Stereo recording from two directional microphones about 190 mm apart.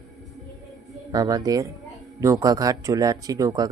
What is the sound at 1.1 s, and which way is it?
Speech, 20° right (ahead or behind).